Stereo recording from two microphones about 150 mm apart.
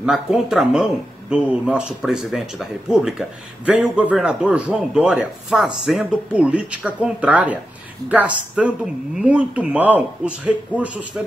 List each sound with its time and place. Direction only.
0.0 s speech: 5° right (ahead or behind)